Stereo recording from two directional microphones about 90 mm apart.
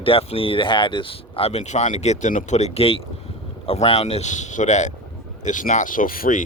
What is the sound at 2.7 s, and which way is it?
Speech, 90° left.